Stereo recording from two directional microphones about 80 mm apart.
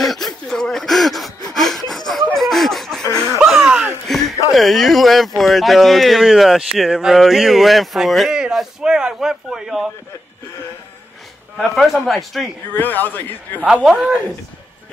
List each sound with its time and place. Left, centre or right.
0.0 s gasp: centre
2.3 s a sound: centre
3.1 s music: left
3.3 s a sound: centre
4.1 s a sound: centre
5.4 s speech: centre
11.5 s speech: centre
12.7 s a man's voice: left
13.8 s a man's voice: centre